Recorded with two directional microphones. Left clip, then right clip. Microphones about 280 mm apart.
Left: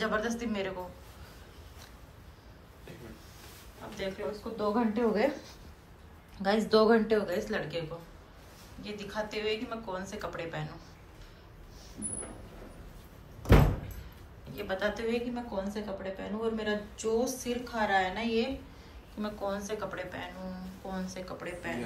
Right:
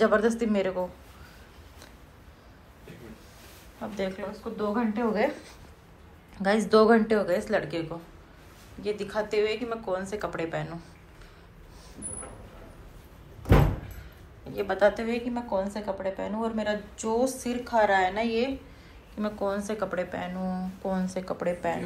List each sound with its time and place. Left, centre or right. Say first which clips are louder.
0.0 s a woman's voice: right 9 dB; centre
3.9 s a woman's voice: right 3 dB; centre
8.8 s a woman's voice: right 7 dB; centre
14.5 s a woman's voice: right 9 dB; centre